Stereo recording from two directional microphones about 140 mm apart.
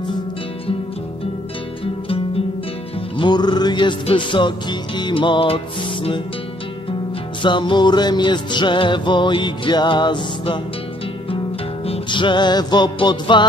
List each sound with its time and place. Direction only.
3.2 s music: 30° left (ahead or behind)
7.4 s music: 35° left (ahead or behind)
11.8 s music: 40° left (ahead or behind)